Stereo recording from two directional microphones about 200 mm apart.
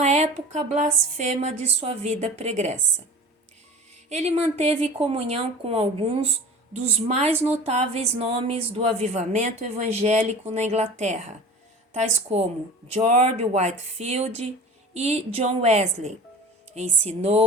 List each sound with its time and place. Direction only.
0.0 s speech: 35° right (ahead or behind)
4.1 s speech: 35° right (ahead or behind)